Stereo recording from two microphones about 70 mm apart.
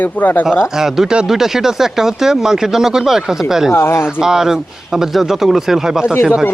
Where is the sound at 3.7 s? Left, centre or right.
Left.